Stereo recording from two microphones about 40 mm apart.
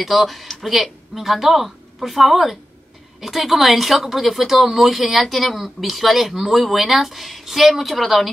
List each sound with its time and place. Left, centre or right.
0.0 s speech: centre